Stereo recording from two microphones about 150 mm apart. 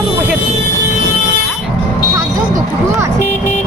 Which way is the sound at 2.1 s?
20° right (ahead or behind).